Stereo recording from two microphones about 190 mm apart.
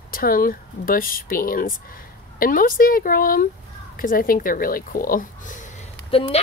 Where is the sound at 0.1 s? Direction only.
50° left (ahead or behind).